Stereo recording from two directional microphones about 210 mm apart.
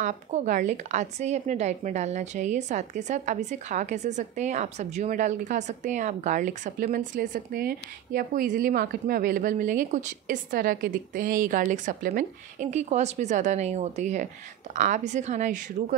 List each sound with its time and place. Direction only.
0.0 s a woman's voice: 35° right (ahead or behind)